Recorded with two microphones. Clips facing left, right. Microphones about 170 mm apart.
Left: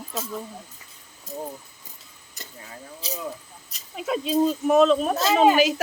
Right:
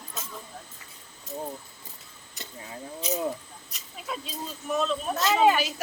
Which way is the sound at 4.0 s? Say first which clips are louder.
Left 15 dB; 90° left.